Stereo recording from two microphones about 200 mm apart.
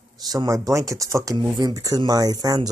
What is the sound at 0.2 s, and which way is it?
Speech, 20° right (ahead or behind).